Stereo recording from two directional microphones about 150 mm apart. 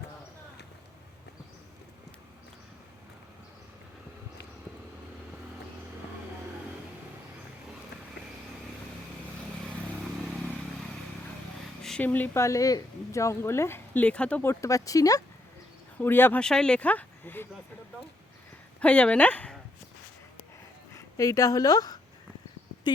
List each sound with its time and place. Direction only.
9.6 s vehicle: 5° left (ahead or behind)
11.8 s speech: 5° left (ahead or behind)
18.8 s speech: 10° left (ahead or behind)
20.9 s speech: 20° left (ahead or behind)